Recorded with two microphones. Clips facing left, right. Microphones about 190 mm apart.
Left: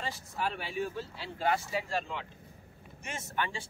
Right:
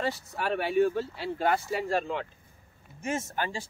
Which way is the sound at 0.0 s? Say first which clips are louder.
Right 5 dB; 65° right (ahead or behind).